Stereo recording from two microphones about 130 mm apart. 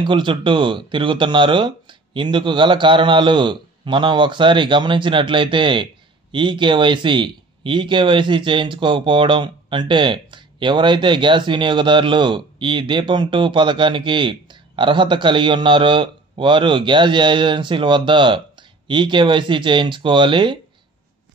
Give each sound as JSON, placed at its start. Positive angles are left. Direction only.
{"t": 0.0, "sound": "speech", "side_deg": -40}